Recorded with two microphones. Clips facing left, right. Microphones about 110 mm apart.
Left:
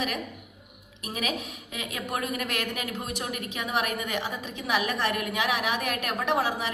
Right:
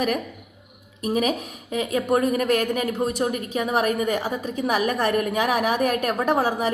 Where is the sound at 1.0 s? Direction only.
40° right (ahead or behind).